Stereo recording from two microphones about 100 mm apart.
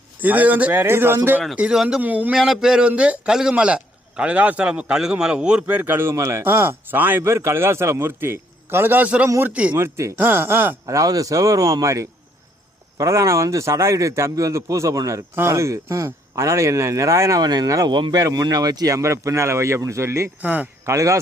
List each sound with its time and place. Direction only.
0.2 s a man's voice: 15° right (ahead or behind)
1.5 s a man's voice: 10° right (ahead or behind)
2.0 s a man's voice: 15° right (ahead or behind)
2.3 s a man's voice: 5° right (ahead or behind)
9.7 s a man's voice: 30° right (ahead or behind)
10.8 s speech: 35° right (ahead or behind)
17.9 s speech: 50° right (ahead or behind)
18.2 s speech: 35° right (ahead or behind)
20.4 s a man's voice: 15° right (ahead or behind)
20.8 s a man's voice: 30° right (ahead or behind)